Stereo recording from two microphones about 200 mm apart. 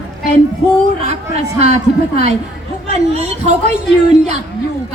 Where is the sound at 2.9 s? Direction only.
35° right (ahead or behind).